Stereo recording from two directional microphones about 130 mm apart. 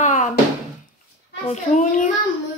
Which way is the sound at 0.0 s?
70° left (ahead or behind).